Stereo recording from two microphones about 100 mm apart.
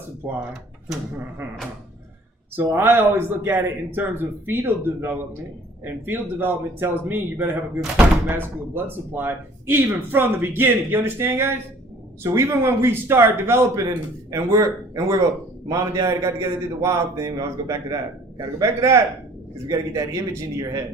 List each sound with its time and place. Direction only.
0.2 s speech: 20° right (ahead or behind)
2.6 s speech: 20° right (ahead or behind)
13.8 s a man's voice: 40° right (ahead or behind)